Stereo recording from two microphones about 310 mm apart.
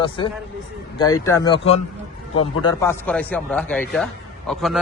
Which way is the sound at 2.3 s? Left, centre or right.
Left.